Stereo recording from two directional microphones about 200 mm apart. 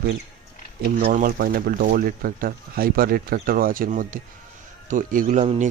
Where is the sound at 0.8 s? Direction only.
45° right (ahead or behind).